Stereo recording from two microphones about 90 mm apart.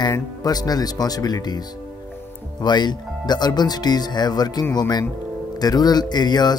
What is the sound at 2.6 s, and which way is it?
Speech, 50° left (ahead or behind).